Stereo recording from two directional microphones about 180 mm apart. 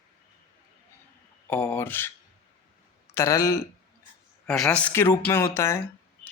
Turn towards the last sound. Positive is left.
turn(degrees=15)  # may be behind; listen again after turning